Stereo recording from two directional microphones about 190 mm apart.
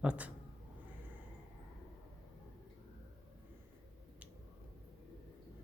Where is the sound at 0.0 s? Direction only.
5° right (ahead or behind).